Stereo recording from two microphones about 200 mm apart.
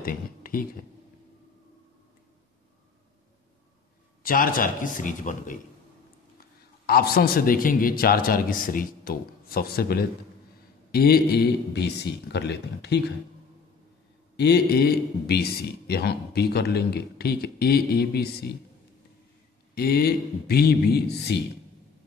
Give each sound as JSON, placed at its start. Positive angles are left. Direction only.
{"t": 0.0, "sound": "speech", "side_deg": 45}
{"t": 4.2, "sound": "a man's voice", "side_deg": 45}
{"t": 6.9, "sound": "a man's voice", "side_deg": 50}
{"t": 14.3, "sound": "a man's voice", "side_deg": 55}
{"t": 19.7, "sound": "a man's voice", "side_deg": 50}